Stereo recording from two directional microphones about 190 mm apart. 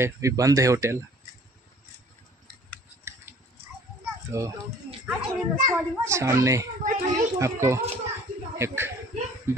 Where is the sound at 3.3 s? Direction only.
10° right (ahead or behind).